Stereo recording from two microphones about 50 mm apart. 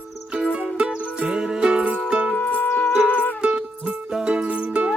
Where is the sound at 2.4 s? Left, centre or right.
Left.